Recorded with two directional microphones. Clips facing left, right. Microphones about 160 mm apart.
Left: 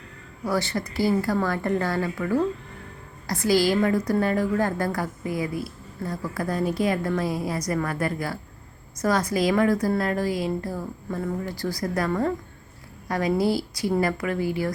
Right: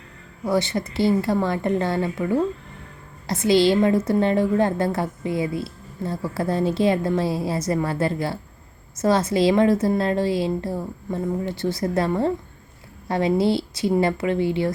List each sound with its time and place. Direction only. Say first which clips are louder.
0.4 s a woman's voice: right 4 dB; 20° right (ahead or behind)